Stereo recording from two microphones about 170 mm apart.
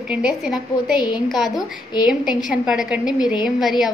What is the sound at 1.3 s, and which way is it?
A woman's voice, centre (ahead or behind).